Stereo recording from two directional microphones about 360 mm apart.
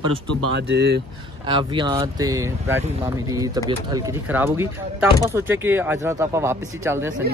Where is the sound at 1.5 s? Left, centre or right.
Centre.